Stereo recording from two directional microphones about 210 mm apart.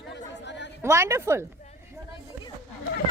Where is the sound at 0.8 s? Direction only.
15° right (ahead or behind).